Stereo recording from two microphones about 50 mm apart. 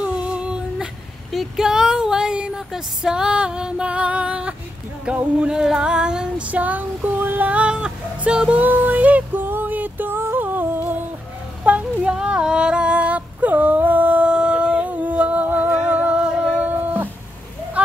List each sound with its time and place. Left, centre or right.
0.0 s female singing: right
1.3 s a sound: centre
2.7 s female singing: centre
5.5 s female singing: centre; by 7.4 s right
7.4 s female singing: right
8.5 s music: right
9.4 s a sound: right
10.1 s music: right
10.4 s music: right
11.7 s music: right
12.0 s a sound: centre; by 17.1 s right
17.8 s a sound: right